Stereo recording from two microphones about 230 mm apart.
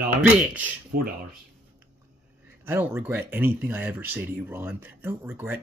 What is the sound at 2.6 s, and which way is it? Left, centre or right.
Speech, centre.